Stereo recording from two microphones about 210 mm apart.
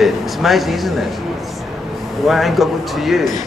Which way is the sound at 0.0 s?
Centre (ahead or behind).